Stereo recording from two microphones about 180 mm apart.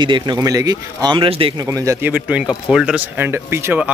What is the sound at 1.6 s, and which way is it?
Speech, 15° right (ahead or behind).